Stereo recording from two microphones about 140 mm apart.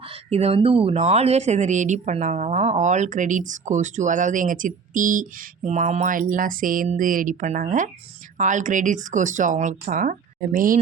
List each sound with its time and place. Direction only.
0.0 s speech: 45° right (ahead or behind); by 6.8 s 80° right
6.8 s speech: 65° right (ahead or behind)